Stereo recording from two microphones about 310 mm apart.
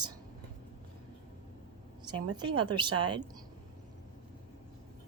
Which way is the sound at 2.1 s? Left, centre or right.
Centre.